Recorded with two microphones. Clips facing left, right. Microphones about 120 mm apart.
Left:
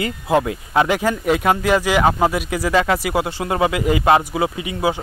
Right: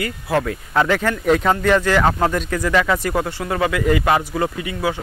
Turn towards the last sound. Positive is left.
turn(degrees=15)  # may be behind; listen again after turning